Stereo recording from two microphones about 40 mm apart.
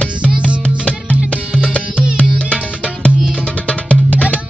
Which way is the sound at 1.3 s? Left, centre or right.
Left.